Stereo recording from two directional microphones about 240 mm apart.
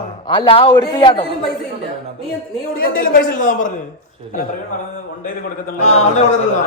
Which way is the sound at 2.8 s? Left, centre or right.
Left.